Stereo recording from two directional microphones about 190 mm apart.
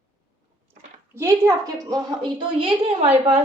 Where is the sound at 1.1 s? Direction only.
15° right (ahead or behind).